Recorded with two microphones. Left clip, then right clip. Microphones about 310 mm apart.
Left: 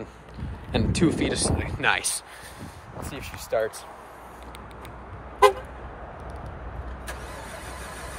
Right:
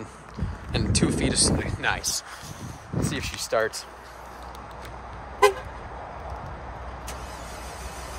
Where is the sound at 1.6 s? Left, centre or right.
Left.